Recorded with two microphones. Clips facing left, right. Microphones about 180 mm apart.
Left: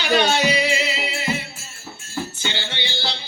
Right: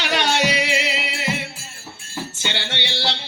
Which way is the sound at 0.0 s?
75° right (ahead or behind).